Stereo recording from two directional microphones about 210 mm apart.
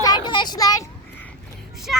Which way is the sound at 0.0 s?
20° left (ahead or behind).